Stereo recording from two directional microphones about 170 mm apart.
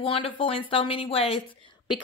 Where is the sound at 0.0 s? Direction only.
35° left (ahead or behind).